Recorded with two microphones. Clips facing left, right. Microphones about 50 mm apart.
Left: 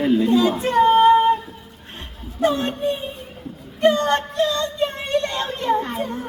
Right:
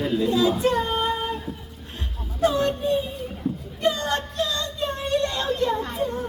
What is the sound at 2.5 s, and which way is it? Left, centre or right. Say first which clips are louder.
Speech: right 1 dB; left.